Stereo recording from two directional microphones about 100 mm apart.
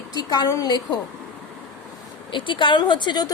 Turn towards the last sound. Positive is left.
turn(degrees=50)  # may be behind; listen again after turning